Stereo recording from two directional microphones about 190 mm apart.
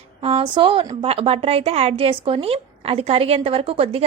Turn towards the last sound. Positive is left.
turn(degrees=-30)  # may be behind; listen again after turning